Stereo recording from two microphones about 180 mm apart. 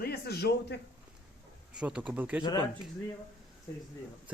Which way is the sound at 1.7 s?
5° right (ahead or behind).